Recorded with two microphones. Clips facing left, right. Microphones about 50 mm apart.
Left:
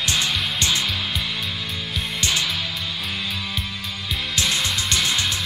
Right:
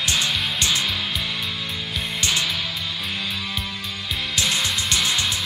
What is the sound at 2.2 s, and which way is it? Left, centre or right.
Music, right.